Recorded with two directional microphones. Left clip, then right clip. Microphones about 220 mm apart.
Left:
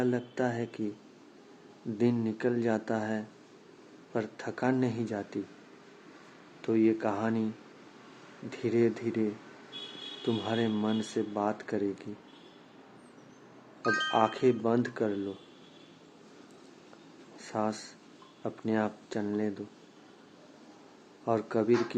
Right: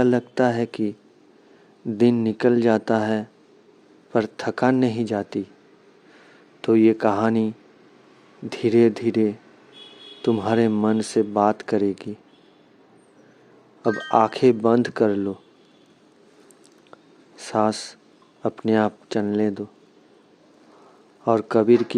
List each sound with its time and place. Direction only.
0.0 s speech: 45° right (ahead or behind)
2.0 s speech: 40° right (ahead or behind)
6.6 s speech: 40° right (ahead or behind)
8.4 s speech: 40° right (ahead or behind)
10.2 s speech: 45° right (ahead or behind)
13.8 s speech: 25° right (ahead or behind)
14.1 s speech: 40° right (ahead or behind)
17.3 s speech: 45° right (ahead or behind)
21.2 s speech: 40° right (ahead or behind)